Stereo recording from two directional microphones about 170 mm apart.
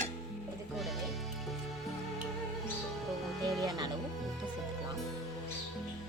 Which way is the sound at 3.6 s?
20° right (ahead or behind).